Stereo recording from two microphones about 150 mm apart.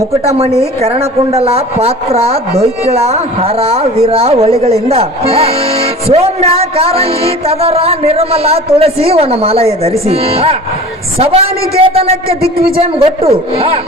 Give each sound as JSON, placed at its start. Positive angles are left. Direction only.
{"t": 0.3, "sound": "a man's voice", "side_deg": -45}
{"t": 12.4, "sound": "a man's voice", "side_deg": -90}
{"t": 12.7, "sound": "a man's voice", "side_deg": -40}